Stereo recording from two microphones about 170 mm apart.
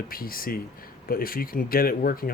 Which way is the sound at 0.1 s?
60° left (ahead or behind).